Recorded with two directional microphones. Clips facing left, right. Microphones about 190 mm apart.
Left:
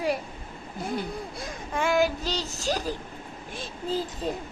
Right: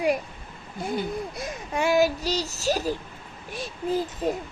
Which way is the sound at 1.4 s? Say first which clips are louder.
Right 1 dB; 20° right (ahead or behind).